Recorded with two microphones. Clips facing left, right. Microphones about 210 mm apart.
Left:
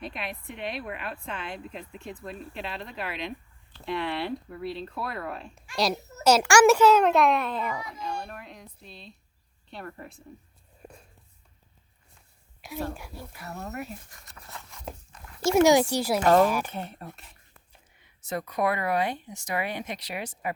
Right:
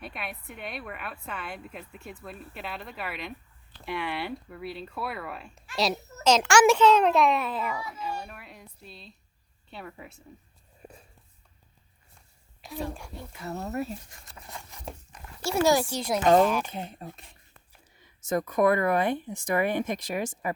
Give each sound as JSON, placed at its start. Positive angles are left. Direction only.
{"t": 0.0, "sound": "a woman's voice", "side_deg": -5}
{"t": 10.8, "sound": "a sound", "side_deg": -5}
{"t": 12.6, "sound": "a woman's voice", "side_deg": 0}
{"t": 13.4, "sound": "speech", "side_deg": -25}
{"t": 14.4, "sound": "a sound", "side_deg": -15}
{"t": 15.4, "sound": "speech", "side_deg": 20}
{"t": 16.7, "sound": "speech", "side_deg": -15}
{"t": 18.0, "sound": "speech", "side_deg": -45}